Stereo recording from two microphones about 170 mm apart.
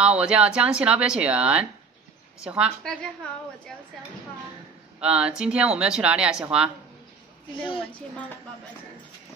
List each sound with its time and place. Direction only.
0.0 s speech: 5° right (ahead or behind)
5.0 s a woman's voice: 5° right (ahead or behind)
7.5 s a woman's voice: 30° left (ahead or behind)